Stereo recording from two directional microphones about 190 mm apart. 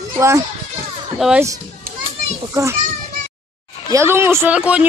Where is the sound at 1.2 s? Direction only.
Centre (ahead or behind).